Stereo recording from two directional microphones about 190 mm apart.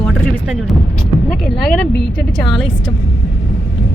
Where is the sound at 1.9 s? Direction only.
65° left (ahead or behind).